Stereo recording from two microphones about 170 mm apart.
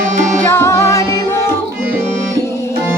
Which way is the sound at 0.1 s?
45° right (ahead or behind).